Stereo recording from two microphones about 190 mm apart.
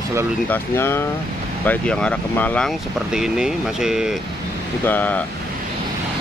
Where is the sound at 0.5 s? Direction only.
10° left (ahead or behind).